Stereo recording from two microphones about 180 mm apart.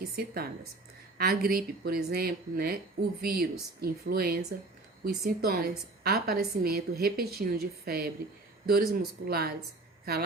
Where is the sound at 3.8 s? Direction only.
55° right (ahead or behind).